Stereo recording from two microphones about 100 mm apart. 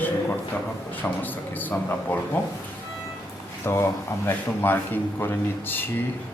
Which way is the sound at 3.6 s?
25° left (ahead or behind).